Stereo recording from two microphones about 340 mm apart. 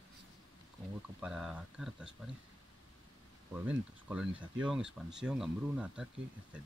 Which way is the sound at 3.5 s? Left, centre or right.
Centre.